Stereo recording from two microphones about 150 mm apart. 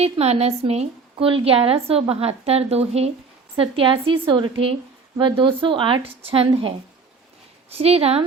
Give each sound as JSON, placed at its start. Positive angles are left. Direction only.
{"t": 0.0, "sound": "a woman's voice", "side_deg": -45}
{"t": 7.7, "sound": "speech", "side_deg": -45}